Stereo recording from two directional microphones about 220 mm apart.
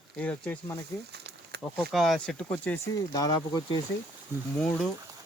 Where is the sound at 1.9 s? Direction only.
Centre (ahead or behind); by 3.8 s 15° left (ahead or behind).